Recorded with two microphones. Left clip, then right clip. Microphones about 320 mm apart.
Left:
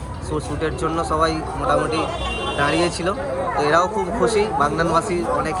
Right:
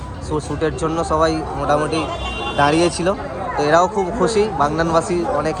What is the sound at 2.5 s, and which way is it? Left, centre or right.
Speech, right.